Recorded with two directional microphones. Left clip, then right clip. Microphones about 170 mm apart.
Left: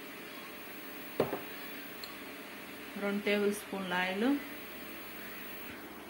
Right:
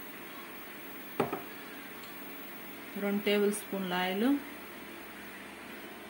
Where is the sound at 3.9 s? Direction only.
50° right (ahead or behind).